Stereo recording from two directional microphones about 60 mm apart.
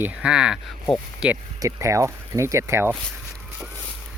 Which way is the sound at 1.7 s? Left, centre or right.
Right.